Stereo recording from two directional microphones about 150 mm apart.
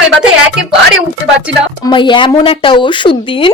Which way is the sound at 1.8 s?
30° left (ahead or behind).